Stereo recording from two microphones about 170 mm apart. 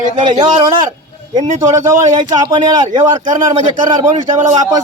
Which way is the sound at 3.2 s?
50° right (ahead or behind).